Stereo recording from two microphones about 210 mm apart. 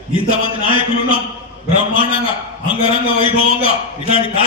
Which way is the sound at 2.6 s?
25° left (ahead or behind).